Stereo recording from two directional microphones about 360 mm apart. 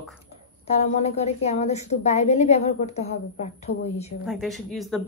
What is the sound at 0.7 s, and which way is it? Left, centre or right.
A woman's voice, centre.